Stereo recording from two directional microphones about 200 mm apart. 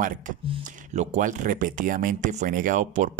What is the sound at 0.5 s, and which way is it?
Speech, 35° right (ahead or behind).